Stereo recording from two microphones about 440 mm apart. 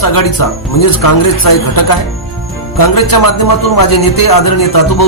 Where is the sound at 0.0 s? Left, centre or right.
Left.